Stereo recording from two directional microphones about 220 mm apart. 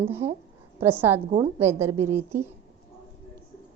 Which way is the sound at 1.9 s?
90° right.